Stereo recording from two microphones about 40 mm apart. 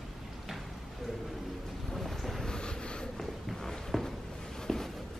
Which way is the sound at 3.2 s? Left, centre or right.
Centre.